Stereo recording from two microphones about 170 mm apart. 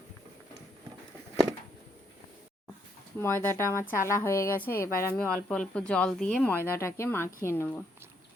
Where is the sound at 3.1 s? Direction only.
15° left (ahead or behind).